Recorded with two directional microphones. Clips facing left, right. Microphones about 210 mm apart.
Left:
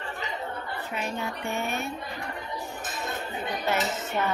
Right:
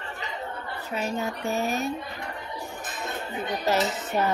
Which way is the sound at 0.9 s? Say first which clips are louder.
Right 4 dB; 40° right (ahead or behind).